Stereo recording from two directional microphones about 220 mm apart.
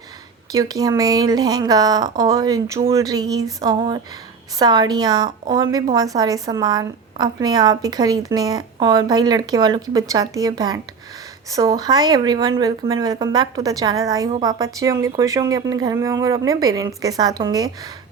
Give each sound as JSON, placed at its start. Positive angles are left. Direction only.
{"t": 0.5, "sound": "a woman's voice", "side_deg": -15}
{"t": 14.3, "sound": "a woman's voice", "side_deg": -25}
{"t": 14.6, "sound": "a woman's voice", "side_deg": -15}